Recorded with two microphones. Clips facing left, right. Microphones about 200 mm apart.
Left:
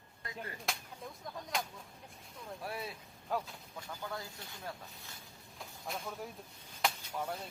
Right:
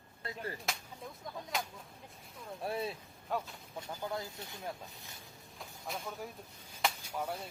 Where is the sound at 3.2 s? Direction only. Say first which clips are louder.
Even; centre (ahead or behind).